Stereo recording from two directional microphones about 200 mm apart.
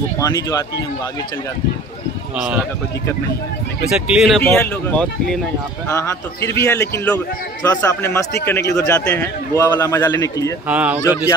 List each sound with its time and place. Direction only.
0.2 s a man's voice: 15° left (ahead or behind)
4.1 s a man's voice: centre (ahead or behind); by 10.5 s 15° left (ahead or behind)
10.7 s speech: 5° right (ahead or behind)
11.0 s a man's voice: 15° left (ahead or behind)